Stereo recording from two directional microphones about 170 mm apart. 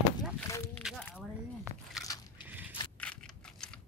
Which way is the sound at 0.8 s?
5° left (ahead or behind).